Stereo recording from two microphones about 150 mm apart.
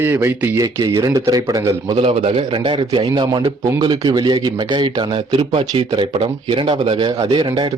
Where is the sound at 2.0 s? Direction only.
40° right (ahead or behind).